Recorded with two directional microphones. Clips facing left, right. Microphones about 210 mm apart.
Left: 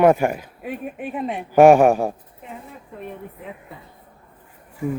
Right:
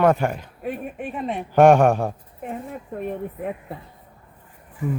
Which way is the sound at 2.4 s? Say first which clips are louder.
Right 7 dB; 50° right (ahead or behind).